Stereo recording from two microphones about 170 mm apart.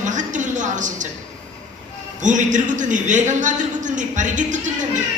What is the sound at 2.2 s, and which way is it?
A man's voice, 45° right (ahead or behind).